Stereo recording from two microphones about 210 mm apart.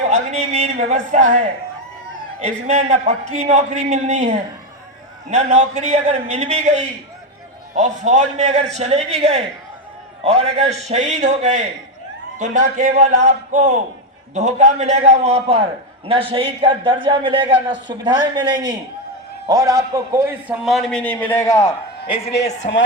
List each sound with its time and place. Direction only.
0.1 s a sound: 30° right (ahead or behind)
2.4 s a man's voice: 30° right (ahead or behind); by 20.6 s 10° right (ahead or behind)
20.7 s a man's voice: centre (ahead or behind)
22.0 s a woman's voice: 25° left (ahead or behind)
22.3 s speech: 55° left (ahead or behind)